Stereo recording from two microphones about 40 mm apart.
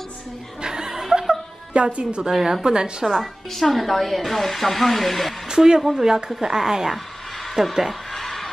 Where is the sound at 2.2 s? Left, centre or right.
Centre.